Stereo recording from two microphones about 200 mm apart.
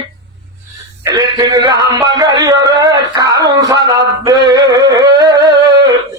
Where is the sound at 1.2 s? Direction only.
20° right (ahead or behind).